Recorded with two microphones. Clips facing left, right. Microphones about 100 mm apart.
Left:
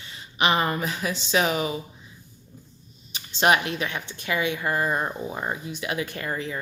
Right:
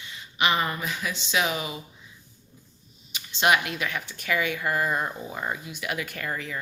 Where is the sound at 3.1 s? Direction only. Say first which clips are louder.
Left 2 dB; 35° left (ahead or behind).